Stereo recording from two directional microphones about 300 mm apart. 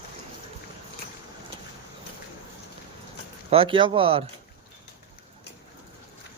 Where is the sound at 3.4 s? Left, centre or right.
Centre.